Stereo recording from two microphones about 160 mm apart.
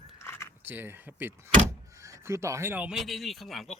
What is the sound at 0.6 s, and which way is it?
Speech, 10° right (ahead or behind).